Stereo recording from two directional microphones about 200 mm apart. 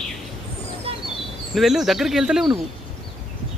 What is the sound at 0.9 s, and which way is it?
Bird, 30° right (ahead or behind).